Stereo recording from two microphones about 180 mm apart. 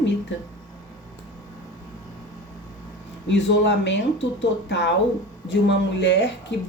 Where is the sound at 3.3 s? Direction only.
80° left.